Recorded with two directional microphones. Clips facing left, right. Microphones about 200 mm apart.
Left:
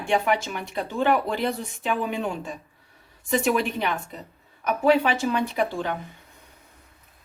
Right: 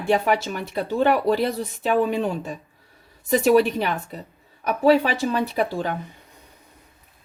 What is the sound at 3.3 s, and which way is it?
Speech, 40° right (ahead or behind).